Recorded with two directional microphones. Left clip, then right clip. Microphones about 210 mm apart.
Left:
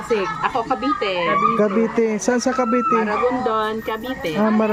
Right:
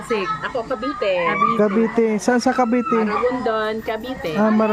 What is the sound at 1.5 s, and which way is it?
Speech, 10° right (ahead or behind).